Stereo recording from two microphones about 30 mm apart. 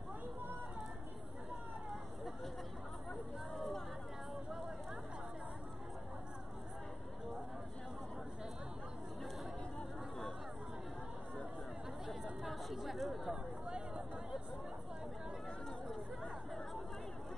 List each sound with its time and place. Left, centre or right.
9.8 s chatter: centre
12.1 s chatter: centre
13.7 s a sound: right